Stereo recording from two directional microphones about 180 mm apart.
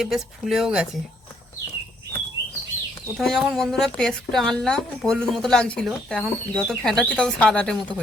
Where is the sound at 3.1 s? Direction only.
Centre (ahead or behind).